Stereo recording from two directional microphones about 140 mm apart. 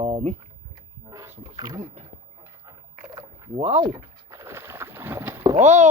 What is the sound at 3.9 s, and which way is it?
Boat, 20° right (ahead or behind).